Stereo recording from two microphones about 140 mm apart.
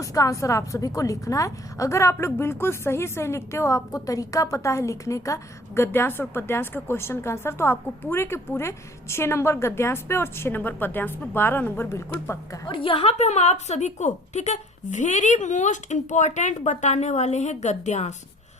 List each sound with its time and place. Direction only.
0.0 s a woman's voice: 25° left (ahead or behind)
12.6 s a woman's voice: 40° left (ahead or behind); by 18.1 s 55° left (ahead or behind)